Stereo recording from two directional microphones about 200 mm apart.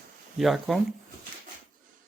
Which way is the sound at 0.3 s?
Centre (ahead or behind).